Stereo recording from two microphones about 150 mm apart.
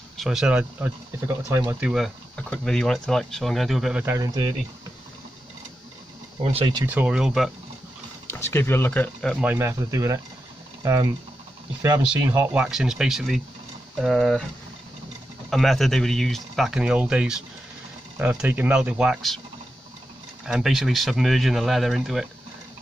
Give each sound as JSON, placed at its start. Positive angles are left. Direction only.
{"t": 0.2, "sound": "speech", "side_deg": -5}
{"t": 4.0, "sound": "speech", "side_deg": -20}
{"t": 6.4, "sound": "speech", "side_deg": -40}
{"t": 6.9, "sound": "speech", "side_deg": -10}
{"t": 8.3, "sound": "speech", "side_deg": 15}
{"t": 9.4, "sound": "speech", "side_deg": -15}
{"t": 15.5, "sound": "speech", "side_deg": 0}
{"t": 20.4, "sound": "speech", "side_deg": -5}